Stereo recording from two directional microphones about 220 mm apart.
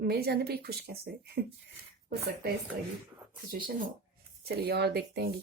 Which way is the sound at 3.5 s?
40° right (ahead or behind).